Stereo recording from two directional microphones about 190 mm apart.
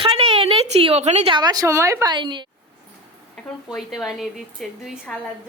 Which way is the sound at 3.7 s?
Centre (ahead or behind).